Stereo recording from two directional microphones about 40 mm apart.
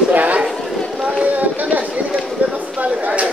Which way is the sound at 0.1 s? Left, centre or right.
Right.